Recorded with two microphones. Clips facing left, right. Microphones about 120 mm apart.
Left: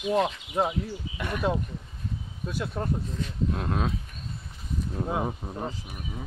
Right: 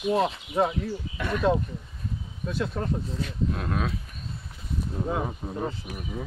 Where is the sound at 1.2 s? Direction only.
10° left (ahead or behind).